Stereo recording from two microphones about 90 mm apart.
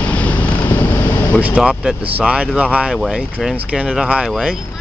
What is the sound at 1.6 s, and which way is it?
Speech, 5° right (ahead or behind).